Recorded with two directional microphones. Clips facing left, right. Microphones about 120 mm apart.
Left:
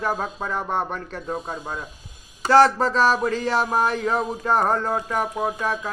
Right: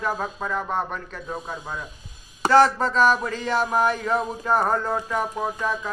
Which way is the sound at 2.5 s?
35° left (ahead or behind).